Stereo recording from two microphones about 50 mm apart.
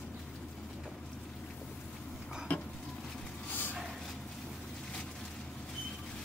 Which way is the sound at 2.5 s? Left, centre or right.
Left.